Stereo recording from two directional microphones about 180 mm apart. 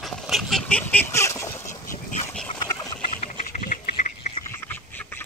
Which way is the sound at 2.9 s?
35° left (ahead or behind).